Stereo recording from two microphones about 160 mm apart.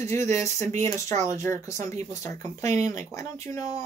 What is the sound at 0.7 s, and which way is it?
Speech, 45° right (ahead or behind).